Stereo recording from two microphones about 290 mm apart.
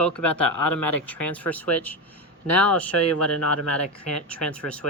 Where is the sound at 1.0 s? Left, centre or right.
Centre.